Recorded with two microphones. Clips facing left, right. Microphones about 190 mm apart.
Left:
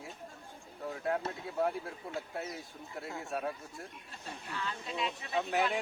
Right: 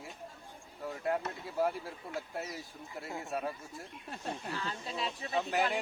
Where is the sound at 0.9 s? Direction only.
Centre (ahead or behind).